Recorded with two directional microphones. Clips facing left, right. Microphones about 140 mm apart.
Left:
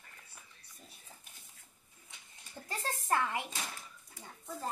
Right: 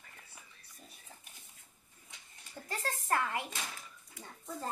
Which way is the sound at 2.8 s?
20° left (ahead or behind).